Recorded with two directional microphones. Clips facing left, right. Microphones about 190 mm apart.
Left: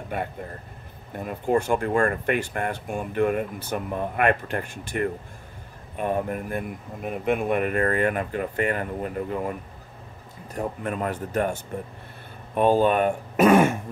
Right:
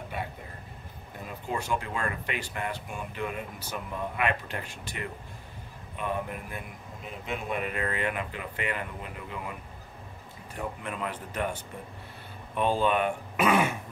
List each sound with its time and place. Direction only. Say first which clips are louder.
0.1 s speech: left 9 dB; 55° left (ahead or behind)
12.5 s speech: left 6 dB; 45° left (ahead or behind)